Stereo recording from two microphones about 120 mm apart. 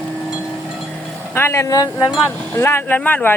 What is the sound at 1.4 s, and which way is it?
Speech, 20° left (ahead or behind).